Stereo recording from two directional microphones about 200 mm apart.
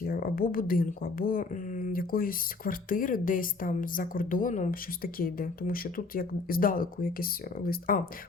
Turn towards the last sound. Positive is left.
turn(degrees=45)  # may be behind; listen again after turning